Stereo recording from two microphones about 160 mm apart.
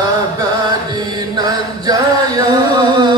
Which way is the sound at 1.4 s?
25° right (ahead or behind).